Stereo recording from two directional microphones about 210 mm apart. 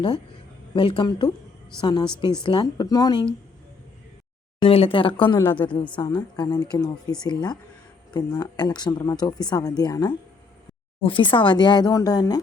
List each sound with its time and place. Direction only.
0.7 s speech: 25° left (ahead or behind)
4.6 s speech: 25° left (ahead or behind)